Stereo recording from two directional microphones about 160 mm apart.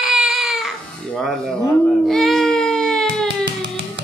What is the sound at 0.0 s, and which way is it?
Baby cry, 5° right (ahead or behind).